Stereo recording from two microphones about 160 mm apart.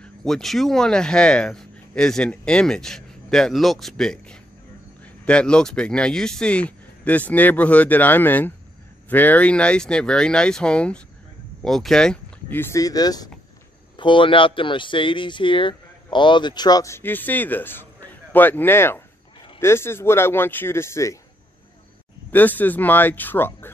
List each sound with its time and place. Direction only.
0.0 s a man's voice: 5° left (ahead or behind)
22.3 s speech: 10° left (ahead or behind)